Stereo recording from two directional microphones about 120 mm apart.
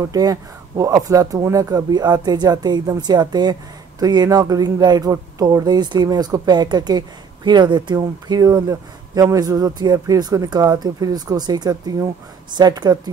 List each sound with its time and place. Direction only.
0.1 s speech: 30° right (ahead or behind)